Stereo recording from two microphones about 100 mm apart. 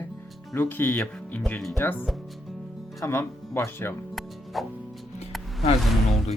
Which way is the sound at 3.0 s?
25° left (ahead or behind).